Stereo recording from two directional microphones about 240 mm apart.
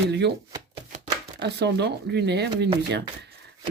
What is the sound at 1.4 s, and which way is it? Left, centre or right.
Speech, right.